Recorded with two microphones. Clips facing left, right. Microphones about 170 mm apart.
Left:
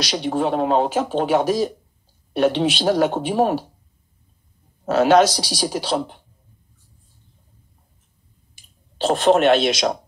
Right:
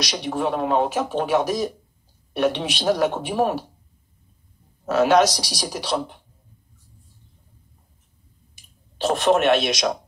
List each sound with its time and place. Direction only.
0.0 s speech: 30° left (ahead or behind)
4.8 s speech: 30° left (ahead or behind)
8.9 s speech: 30° left (ahead or behind)